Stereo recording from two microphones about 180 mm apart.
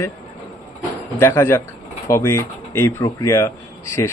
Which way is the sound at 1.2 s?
15° left (ahead or behind).